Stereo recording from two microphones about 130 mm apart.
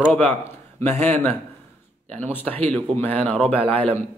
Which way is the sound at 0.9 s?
15° left (ahead or behind).